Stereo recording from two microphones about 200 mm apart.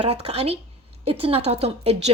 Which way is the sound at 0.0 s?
30° right (ahead or behind).